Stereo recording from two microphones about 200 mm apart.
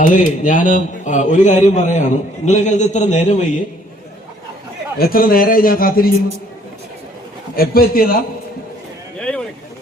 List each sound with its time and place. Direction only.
0.0 s a man's voice: 40° left (ahead or behind)
4.9 s a man's voice: 45° left (ahead or behind)
7.5 s a man's voice: 50° left (ahead or behind)
9.1 s a sound: 5° left (ahead or behind)